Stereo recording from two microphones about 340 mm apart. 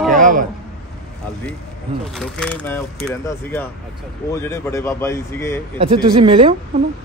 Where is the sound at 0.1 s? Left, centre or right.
Right.